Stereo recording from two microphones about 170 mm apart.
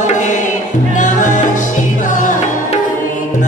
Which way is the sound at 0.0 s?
45° left (ahead or behind).